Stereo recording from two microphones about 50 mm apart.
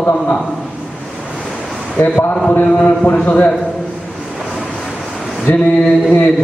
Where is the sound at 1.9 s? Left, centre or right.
Left.